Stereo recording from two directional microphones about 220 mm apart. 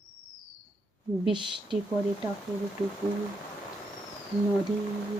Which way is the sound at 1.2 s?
20° right (ahead or behind).